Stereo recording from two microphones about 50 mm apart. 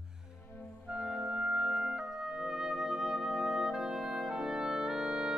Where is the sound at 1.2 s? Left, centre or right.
Right.